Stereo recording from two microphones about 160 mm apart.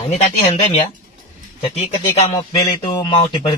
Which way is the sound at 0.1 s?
40° left (ahead or behind).